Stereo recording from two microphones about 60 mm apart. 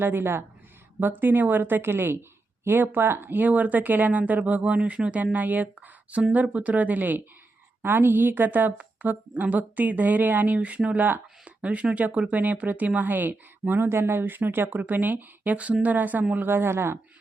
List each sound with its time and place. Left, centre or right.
0.0 s speech: right